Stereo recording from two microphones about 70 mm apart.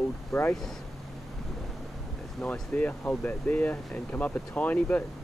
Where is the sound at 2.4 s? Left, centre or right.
Left.